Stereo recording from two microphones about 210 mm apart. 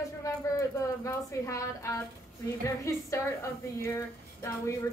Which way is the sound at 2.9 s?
15° left (ahead or behind).